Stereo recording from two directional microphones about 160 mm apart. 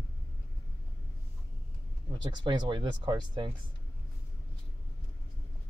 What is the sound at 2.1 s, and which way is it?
Speech, 30° right (ahead or behind).